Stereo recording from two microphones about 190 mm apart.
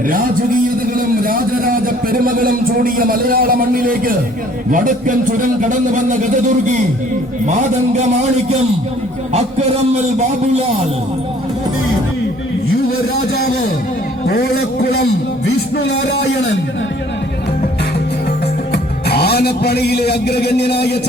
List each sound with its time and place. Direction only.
0.9 s a man's voice: 50° right (ahead or behind)
14.3 s a man's voice: 55° left (ahead or behind)
16.3 s a man's voice: 70° left (ahead or behind)
18.7 s music: 60° left (ahead or behind)